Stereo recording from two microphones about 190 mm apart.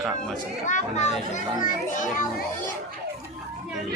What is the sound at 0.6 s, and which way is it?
A child's voice, 40° left (ahead or behind).